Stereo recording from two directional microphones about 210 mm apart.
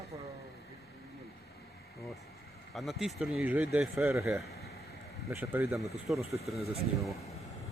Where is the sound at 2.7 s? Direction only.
Centre (ahead or behind).